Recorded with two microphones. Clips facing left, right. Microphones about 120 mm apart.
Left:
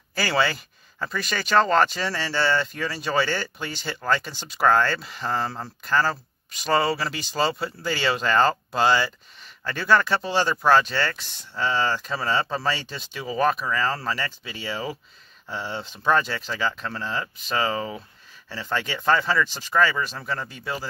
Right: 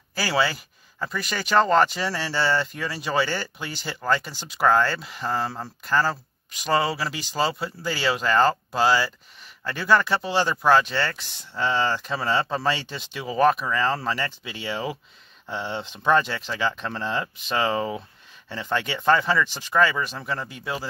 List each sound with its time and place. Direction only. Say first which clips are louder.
0.1 s speech: even; 10° right (ahead or behind)
16.8 s speech: right 2 dB; 25° right (ahead or behind); by 20.9 s 10° right (ahead or behind)